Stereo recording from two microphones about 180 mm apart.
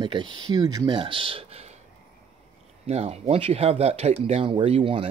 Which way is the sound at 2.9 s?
35° right (ahead or behind).